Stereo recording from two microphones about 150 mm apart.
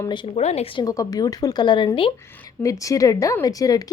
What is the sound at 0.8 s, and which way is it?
Speech, 25° left (ahead or behind).